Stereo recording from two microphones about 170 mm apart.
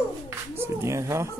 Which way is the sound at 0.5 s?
15° right (ahead or behind).